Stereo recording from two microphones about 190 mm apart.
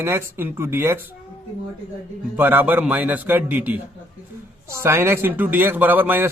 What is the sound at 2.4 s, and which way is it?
A man's voice, 10° right (ahead or behind).